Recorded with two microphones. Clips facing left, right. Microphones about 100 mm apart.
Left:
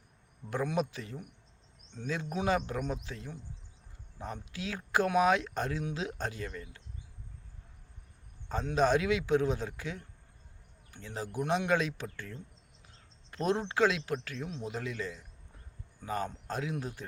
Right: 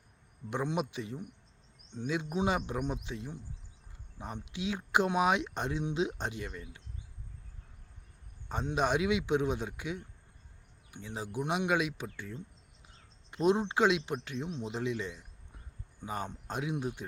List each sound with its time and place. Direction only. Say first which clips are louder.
0.5 s speech: left 1 dB; 20° right (ahead or behind)
8.4 s a man's voice: left 3 dB; 15° right (ahead or behind)